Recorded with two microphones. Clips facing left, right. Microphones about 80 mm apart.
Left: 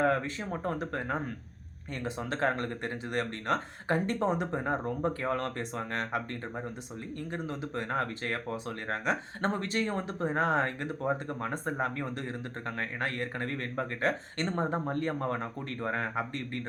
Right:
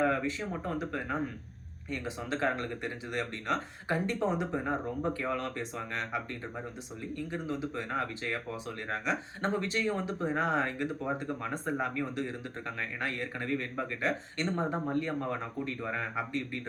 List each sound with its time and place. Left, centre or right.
0.0 s a man's voice: left
14.5 s a man's voice: left